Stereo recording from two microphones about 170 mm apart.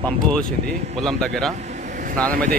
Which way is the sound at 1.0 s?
5° left (ahead or behind).